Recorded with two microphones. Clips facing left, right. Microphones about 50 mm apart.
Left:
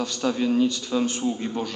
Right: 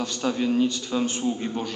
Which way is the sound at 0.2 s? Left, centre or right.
Centre.